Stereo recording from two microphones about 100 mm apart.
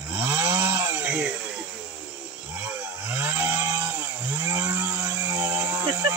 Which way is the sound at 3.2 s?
25° right (ahead or behind).